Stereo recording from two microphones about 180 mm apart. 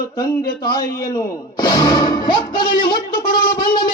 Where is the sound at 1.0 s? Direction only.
20° left (ahead or behind).